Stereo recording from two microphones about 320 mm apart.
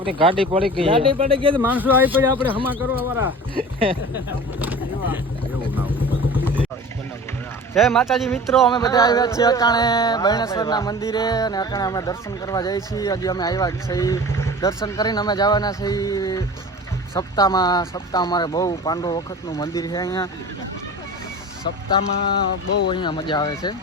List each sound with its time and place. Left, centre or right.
0.0 s speech: centre
1.5 s speech: centre
4.6 s boat: centre
6.4 s vehicle: centre
7.7 s speech: centre
8.7 s a sound: centre
22.9 s a sound: centre